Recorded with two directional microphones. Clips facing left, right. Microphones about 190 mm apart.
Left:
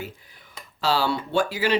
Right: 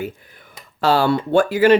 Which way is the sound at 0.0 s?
55° right (ahead or behind).